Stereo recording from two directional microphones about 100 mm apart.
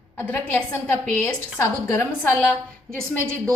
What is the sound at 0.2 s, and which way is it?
A woman's voice, 20° left (ahead or behind).